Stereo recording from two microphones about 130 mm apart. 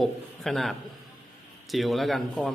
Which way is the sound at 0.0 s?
Centre (ahead or behind).